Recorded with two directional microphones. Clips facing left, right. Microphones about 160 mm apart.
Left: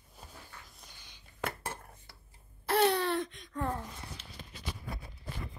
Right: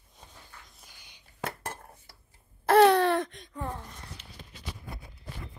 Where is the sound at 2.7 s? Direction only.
70° right (ahead or behind).